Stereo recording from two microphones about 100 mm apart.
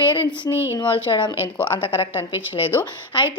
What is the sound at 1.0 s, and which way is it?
A woman's voice, 55° left (ahead or behind).